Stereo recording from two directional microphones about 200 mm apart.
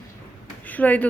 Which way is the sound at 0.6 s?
10° left (ahead or behind).